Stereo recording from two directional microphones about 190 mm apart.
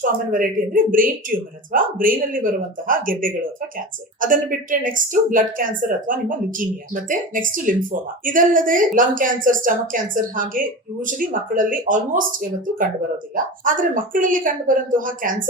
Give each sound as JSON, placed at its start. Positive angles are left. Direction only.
{"t": 0.3, "sound": "a woman's voice", "side_deg": -45}